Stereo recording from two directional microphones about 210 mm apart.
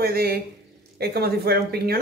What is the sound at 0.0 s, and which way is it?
A woman's voice, 45° right (ahead or behind).